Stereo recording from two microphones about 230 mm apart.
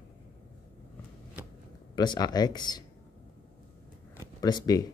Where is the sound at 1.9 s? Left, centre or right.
Centre.